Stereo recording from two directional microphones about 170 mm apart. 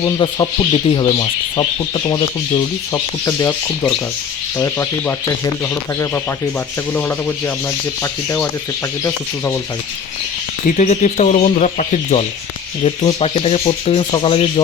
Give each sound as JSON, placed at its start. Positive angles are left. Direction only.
{"t": 0.0, "sound": "speech", "side_deg": 25}
{"t": 6.9, "sound": "speech", "side_deg": 15}
{"t": 10.8, "sound": "speech", "side_deg": 45}
{"t": 12.8, "sound": "speech", "side_deg": 30}